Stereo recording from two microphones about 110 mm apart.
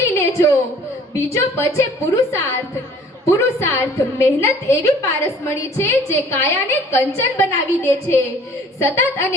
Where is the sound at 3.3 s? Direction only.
25° left (ahead or behind).